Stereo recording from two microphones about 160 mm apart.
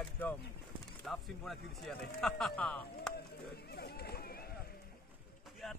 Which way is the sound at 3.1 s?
85° left.